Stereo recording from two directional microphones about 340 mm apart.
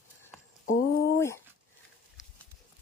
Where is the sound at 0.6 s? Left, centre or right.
Left.